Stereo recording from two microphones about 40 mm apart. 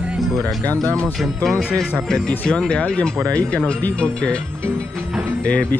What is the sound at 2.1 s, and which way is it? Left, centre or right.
Speech, centre.